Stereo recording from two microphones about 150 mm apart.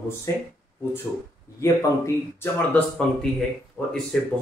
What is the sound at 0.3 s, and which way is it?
Speech, 20° left (ahead or behind).